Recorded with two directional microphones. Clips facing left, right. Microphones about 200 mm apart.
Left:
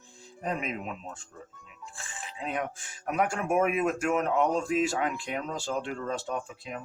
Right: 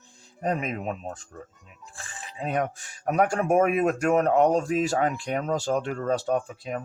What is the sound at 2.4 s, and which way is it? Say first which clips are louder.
Speech: right 6 dB; 40° right (ahead or behind).